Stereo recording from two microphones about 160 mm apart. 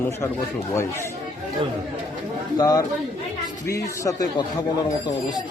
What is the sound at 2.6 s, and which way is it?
A man's voice, 20° left (ahead or behind).